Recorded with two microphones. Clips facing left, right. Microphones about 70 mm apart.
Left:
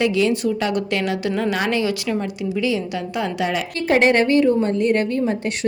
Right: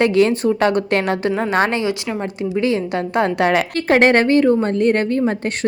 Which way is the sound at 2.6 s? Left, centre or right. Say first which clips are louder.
Right 4 dB; right.